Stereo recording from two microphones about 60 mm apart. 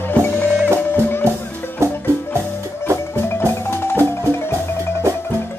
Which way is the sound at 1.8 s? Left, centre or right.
Right.